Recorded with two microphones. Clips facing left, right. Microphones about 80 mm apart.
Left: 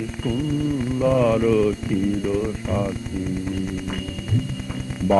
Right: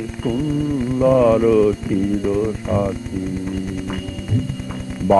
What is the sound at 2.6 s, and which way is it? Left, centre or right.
Speech, right.